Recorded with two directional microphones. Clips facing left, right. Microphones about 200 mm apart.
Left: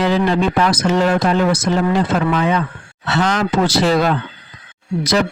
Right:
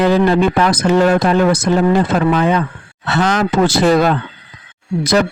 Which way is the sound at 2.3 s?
40° right (ahead or behind).